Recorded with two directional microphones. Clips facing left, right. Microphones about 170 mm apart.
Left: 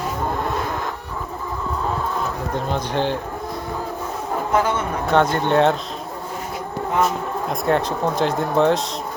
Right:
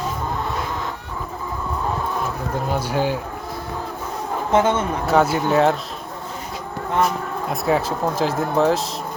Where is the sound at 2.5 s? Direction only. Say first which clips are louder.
Right 1 dB; 5° right (ahead or behind).